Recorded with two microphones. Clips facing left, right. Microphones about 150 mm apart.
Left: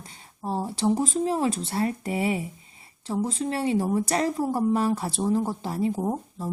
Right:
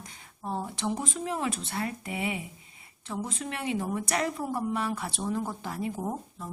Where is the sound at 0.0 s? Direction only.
30° left (ahead or behind).